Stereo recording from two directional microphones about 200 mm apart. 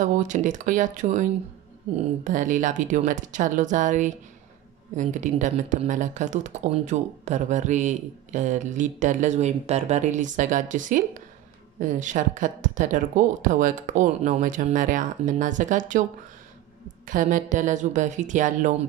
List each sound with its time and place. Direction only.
0.0 s speech: 40° right (ahead or behind)
2.2 s speech: 40° right (ahead or behind)
17.0 s speech: 40° right (ahead or behind)